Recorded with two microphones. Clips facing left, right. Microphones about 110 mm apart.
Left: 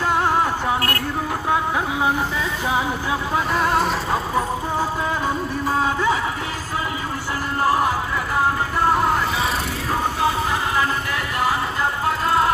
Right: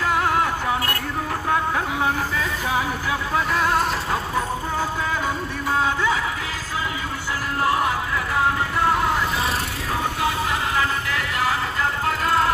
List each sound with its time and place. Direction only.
0.1 s music: centre (ahead or behind)
1.5 s music: 20° left (ahead or behind)
3.5 s music: centre (ahead or behind)
8.9 s vehicle: centre (ahead or behind)